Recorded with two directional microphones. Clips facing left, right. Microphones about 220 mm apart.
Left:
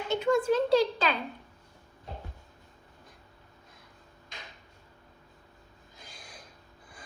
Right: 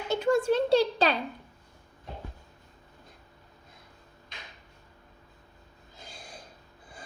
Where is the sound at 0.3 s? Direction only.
30° right (ahead or behind).